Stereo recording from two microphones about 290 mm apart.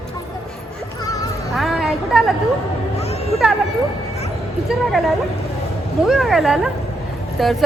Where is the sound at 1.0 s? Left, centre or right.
Centre.